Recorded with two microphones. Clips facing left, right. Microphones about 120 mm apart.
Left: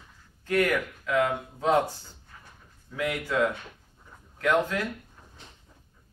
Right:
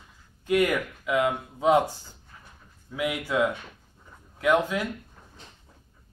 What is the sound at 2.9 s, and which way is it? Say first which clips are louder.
Speech: right 1 dB; 15° right (ahead or behind).